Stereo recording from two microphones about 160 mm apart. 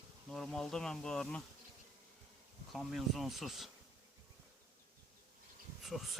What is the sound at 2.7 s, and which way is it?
Speech, centre (ahead or behind).